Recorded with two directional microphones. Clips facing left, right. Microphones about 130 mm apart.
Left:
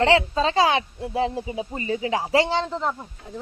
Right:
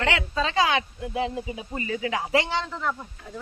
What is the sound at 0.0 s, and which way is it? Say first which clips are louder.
Speech: left 7 dB; 30° left (ahead or behind).